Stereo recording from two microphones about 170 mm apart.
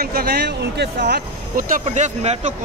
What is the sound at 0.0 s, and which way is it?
Speech, 65° right (ahead or behind).